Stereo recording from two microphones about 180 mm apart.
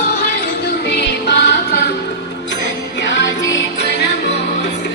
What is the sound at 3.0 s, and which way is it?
Music, 80° left.